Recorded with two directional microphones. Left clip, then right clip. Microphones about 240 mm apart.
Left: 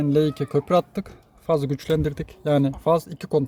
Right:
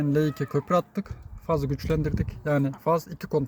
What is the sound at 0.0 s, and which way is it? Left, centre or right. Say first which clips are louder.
Speech: left 4 dB; centre.